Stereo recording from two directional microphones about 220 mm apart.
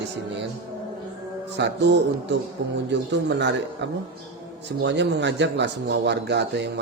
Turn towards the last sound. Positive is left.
turn(degrees=-50)  # may be behind; listen again after turning